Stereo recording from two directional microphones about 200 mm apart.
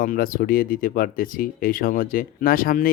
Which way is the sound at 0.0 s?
45° left (ahead or behind).